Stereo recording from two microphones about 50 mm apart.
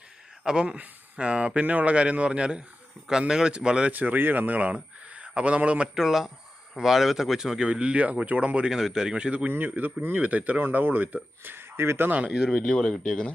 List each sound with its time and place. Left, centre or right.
0.4 s a man's voice: centre
3.9 s speech: right
5.9 s speech: centre
7.7 s speech: right
8.7 s a man's voice: centre
9.5 s a man's voice: right
12.5 s speech: centre
12.7 s speech: left